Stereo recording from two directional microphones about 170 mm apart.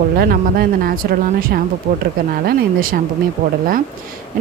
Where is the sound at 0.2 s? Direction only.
65° right (ahead or behind).